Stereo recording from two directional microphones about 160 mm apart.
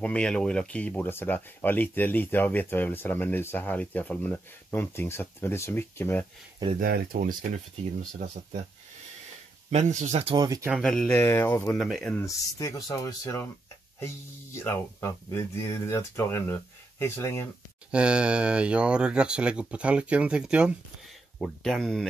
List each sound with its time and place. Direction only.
0.0 s speech: 5° left (ahead or behind)
6.8 s speech: 65° right (ahead or behind)
9.7 s speech: 50° right (ahead or behind)
10.2 s speech: 25° right (ahead or behind)
10.7 s speech: 5° left (ahead or behind)
11.8 s speech: 5° left (ahead or behind)
17.9 s speech: 5° right (ahead or behind)